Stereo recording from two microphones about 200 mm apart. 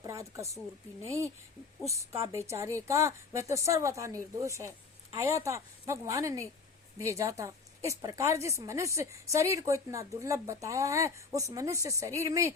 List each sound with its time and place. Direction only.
0.0 s a sound: 15° right (ahead or behind)
1.0 s a woman's voice: 15° right (ahead or behind)
2.3 s a woman's voice: 15° right (ahead or behind)